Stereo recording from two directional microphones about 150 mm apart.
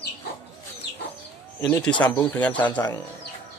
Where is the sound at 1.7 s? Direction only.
5° left (ahead or behind).